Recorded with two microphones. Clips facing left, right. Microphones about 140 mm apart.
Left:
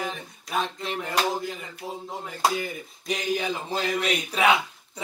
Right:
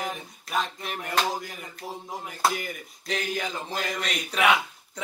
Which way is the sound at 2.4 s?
15° left (ahead or behind).